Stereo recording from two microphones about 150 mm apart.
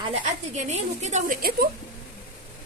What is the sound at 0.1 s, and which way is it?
A woman's voice, 50° right (ahead or behind).